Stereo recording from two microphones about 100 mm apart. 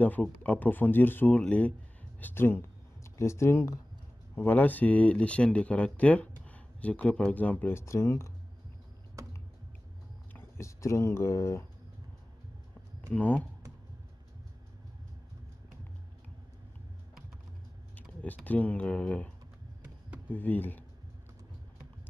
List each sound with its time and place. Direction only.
0.0 s speech: 15° left (ahead or behind)
4.4 s speech: 15° left (ahead or behind)
10.3 s speech: 30° left (ahead or behind)
13.1 s speech: 15° left (ahead or behind)
18.2 s speech: 15° left (ahead or behind)